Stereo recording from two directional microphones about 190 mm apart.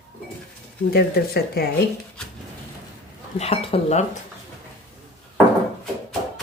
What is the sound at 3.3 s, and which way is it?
Speech, 35° left (ahead or behind).